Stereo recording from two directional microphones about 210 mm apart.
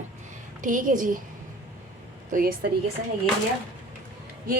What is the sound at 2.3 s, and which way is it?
Speech, 45° right (ahead or behind).